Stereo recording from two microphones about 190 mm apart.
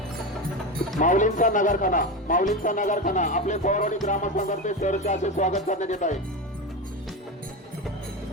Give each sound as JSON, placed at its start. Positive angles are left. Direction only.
{"t": 0.9, "sound": "speech", "side_deg": 40}
{"t": 4.0, "sound": "music", "side_deg": 40}